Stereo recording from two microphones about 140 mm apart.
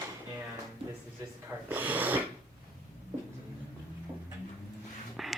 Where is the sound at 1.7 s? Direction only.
10° right (ahead or behind).